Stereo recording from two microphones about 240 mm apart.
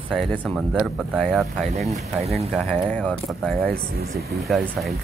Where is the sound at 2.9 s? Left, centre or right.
Centre.